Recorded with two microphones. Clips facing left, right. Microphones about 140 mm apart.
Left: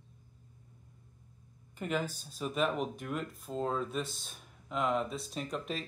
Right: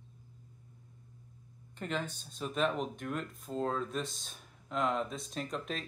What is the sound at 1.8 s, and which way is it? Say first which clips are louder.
Speech: left 3 dB; 5° left (ahead or behind).